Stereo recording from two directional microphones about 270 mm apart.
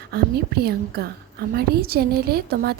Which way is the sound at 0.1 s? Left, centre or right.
Right.